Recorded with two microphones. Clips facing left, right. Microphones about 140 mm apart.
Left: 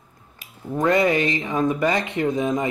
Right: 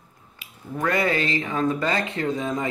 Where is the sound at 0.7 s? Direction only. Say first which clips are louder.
Left 5 dB; 20° left (ahead or behind).